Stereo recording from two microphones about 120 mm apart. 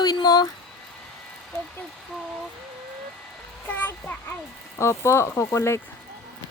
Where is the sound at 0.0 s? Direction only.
35° left (ahead or behind).